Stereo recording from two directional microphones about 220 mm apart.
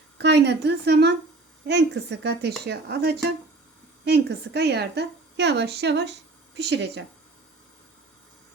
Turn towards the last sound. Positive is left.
turn(degrees=-50)  # may be behind; listen again after turning